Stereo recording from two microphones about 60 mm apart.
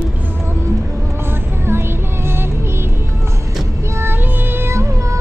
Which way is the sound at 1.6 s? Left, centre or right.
Right.